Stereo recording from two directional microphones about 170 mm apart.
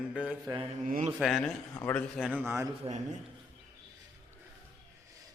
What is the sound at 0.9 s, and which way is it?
Mantra, 50° right (ahead or behind).